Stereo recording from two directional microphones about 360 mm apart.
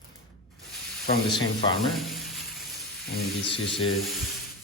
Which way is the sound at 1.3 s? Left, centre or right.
Centre.